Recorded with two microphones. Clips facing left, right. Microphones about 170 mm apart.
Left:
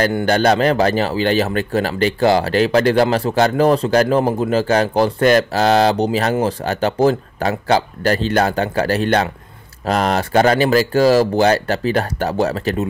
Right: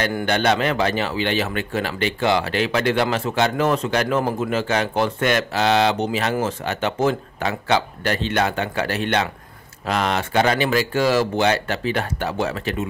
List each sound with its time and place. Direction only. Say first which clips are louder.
0.2 s speech: left 4 dB; 40° left (ahead or behind)